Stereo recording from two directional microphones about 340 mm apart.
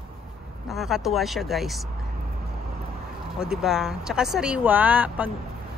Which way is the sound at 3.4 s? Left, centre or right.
Centre.